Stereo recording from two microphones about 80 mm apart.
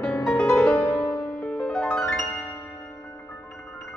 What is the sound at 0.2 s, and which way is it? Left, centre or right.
Music, centre.